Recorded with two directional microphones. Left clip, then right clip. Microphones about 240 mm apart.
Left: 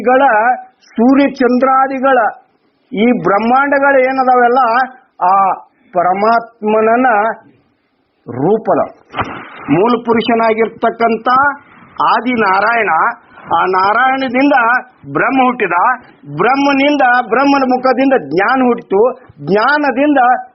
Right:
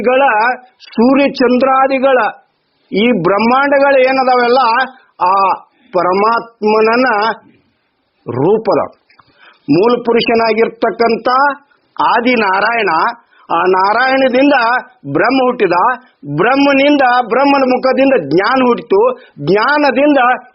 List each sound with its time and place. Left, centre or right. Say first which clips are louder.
0.0 s speech: left 1 dB; right
9.8 s speech: right 2 dB; right